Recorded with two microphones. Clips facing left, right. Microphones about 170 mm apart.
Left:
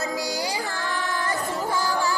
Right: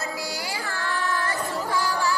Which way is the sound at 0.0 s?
20° left (ahead or behind).